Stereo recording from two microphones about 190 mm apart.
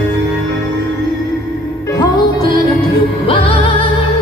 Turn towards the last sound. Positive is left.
turn(degrees=30)  # may be behind; listen again after turning